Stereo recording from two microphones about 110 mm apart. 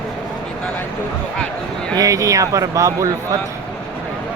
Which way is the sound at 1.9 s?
35° right (ahead or behind).